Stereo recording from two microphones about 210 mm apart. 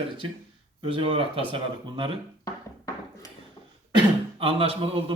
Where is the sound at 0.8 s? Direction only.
25° right (ahead or behind).